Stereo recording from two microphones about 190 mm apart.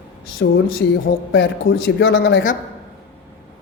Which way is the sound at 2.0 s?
70° left (ahead or behind).